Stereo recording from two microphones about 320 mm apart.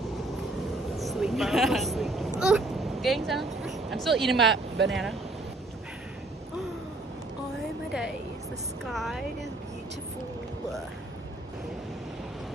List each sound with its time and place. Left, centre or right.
0.9 s a sound: centre
2.4 s speech: centre
4.4 s speech: right
8.8 s a woman's voice: centre